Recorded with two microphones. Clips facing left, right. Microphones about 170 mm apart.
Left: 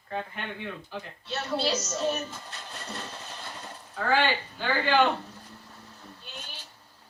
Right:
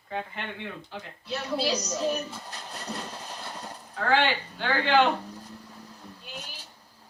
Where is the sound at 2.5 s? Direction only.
35° right (ahead or behind).